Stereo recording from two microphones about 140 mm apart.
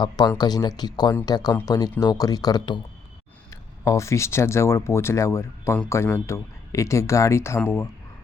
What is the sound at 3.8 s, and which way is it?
Speech, 20° left (ahead or behind).